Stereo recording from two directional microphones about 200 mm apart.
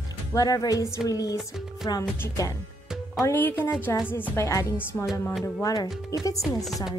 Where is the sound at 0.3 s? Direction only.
20° left (ahead or behind).